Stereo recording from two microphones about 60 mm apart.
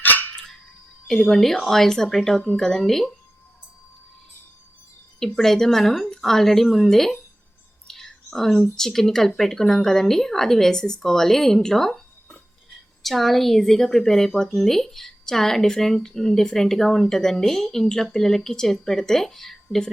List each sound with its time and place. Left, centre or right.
0.0 s a sound: left
1.0 s a woman's voice: centre
5.2 s a woman's voice: centre